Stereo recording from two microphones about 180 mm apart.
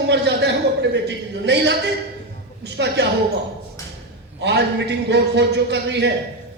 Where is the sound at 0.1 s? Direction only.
70° right (ahead or behind).